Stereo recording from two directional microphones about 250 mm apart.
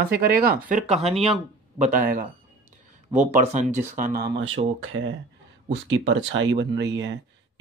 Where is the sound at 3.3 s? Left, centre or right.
Right.